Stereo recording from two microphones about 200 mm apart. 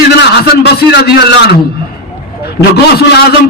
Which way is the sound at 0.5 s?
55° left (ahead or behind).